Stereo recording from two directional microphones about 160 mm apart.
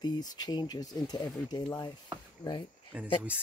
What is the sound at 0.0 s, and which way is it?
Speech, 25° left (ahead or behind).